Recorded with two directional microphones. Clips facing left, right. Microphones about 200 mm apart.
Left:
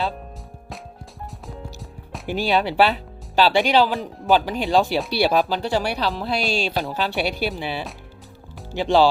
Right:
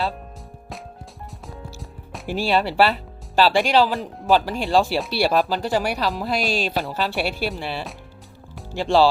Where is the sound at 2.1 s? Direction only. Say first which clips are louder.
Even; centre (ahead or behind).